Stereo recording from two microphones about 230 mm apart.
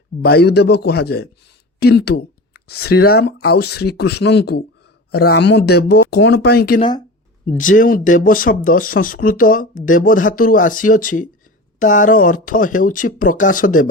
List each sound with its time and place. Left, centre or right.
0.2 s speech: left